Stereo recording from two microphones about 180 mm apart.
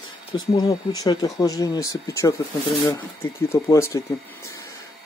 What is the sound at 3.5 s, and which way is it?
Speech, 15° left (ahead or behind).